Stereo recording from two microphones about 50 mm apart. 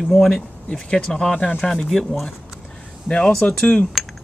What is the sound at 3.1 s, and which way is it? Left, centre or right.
Speech, centre.